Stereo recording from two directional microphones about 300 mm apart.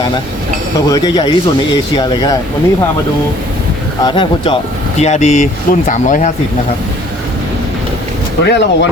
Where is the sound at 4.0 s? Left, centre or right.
Centre.